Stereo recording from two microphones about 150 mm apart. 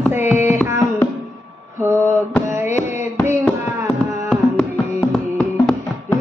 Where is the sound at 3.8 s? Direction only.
10° left (ahead or behind).